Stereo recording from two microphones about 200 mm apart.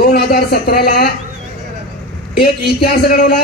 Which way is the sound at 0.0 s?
50° left (ahead or behind).